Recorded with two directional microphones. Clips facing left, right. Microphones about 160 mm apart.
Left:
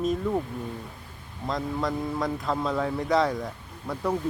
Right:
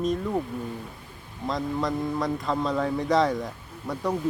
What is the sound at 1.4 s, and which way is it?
A man's voice, centre (ahead or behind).